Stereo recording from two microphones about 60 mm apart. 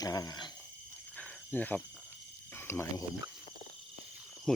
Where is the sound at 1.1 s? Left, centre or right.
Left.